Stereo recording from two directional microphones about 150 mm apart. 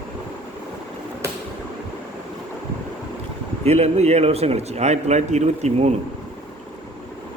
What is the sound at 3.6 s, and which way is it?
A man's voice, 45° right (ahead or behind).